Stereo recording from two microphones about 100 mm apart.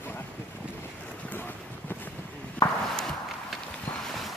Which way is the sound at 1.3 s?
20° left (ahead or behind).